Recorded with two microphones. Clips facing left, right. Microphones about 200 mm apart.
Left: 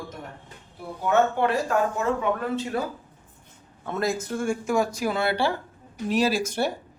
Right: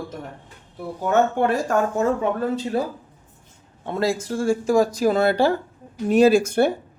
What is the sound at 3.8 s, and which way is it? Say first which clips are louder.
A man's voice: right 4 dB; 30° right (ahead or behind).